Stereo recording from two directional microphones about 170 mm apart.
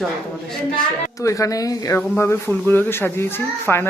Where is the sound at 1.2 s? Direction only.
20° left (ahead or behind).